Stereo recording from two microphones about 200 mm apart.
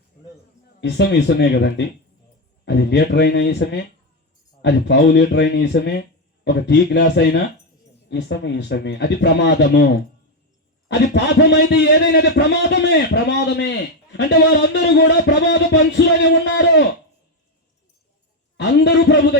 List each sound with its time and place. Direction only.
0.8 s a man's voice: 60° left (ahead or behind)
10.8 s a man's voice: 60° left (ahead or behind)
18.5 s a man's voice: 60° left (ahead or behind)